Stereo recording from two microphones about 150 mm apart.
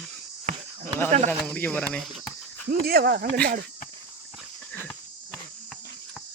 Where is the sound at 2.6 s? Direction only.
90° right.